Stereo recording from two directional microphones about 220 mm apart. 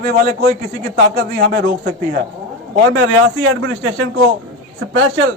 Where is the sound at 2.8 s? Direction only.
65° right (ahead or behind).